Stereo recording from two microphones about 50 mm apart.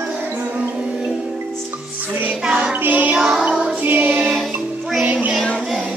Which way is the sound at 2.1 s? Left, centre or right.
Right.